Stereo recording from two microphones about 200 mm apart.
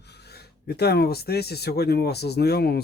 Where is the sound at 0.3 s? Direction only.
55° left (ahead or behind).